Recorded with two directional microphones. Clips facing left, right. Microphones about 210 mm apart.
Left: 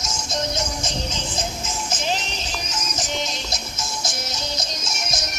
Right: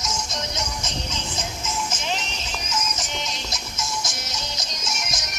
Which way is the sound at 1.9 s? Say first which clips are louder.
Left 3 dB; 35° left (ahead or behind).